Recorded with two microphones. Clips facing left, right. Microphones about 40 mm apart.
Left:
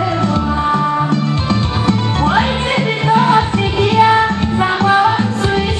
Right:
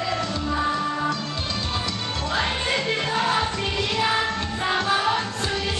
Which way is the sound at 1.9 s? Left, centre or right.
Left.